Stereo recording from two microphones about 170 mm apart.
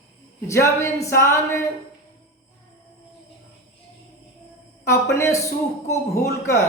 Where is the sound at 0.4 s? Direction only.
15° left (ahead or behind).